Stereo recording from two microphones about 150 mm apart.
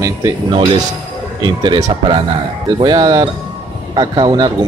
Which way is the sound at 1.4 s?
30° right (ahead or behind).